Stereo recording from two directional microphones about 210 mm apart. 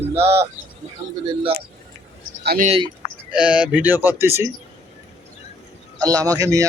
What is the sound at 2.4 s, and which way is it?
Speech, 50° right (ahead or behind).